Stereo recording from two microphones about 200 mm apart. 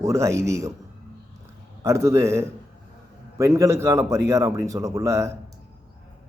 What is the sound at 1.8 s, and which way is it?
A man's voice, 15° right (ahead or behind).